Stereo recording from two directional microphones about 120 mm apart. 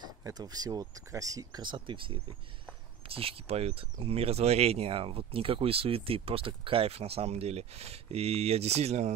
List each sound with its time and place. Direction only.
0.0 s speech: 35° right (ahead or behind); by 9.1 s 65° right (ahead or behind)